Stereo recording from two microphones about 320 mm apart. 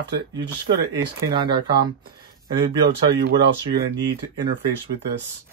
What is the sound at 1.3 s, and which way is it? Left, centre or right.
Speech, centre.